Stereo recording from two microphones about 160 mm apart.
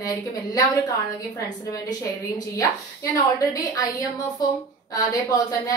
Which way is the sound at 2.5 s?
20° left (ahead or behind).